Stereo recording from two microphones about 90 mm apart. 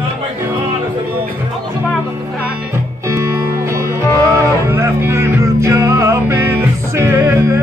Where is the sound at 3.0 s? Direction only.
30° right (ahead or behind).